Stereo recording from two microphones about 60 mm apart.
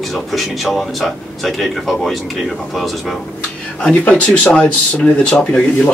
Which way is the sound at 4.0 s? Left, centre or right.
Left.